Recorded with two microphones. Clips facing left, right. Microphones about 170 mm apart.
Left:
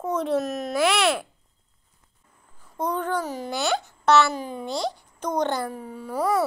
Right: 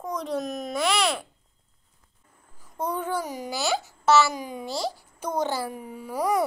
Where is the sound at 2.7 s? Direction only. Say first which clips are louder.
Left 2 dB; 10° right (ahead or behind).